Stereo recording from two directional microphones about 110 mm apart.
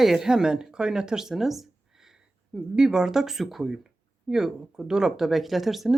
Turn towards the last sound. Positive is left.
turn(degrees=0)  # may be behind; listen again after turning